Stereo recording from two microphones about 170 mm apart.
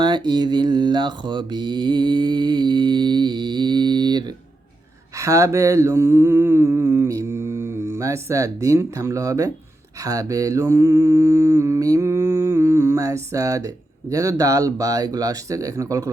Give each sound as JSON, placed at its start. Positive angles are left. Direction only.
{"t": 0.0, "sound": "mantra", "side_deg": -25}